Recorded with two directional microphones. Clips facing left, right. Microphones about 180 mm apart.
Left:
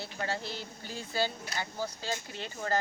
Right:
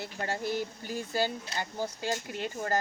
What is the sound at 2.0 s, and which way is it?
Speech, 45° right (ahead or behind).